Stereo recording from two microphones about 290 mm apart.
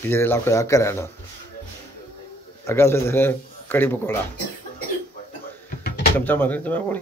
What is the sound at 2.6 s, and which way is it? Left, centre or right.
A man's voice, centre.